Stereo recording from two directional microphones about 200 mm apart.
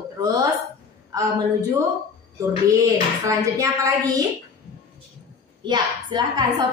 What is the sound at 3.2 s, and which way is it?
Speech, 15° right (ahead or behind).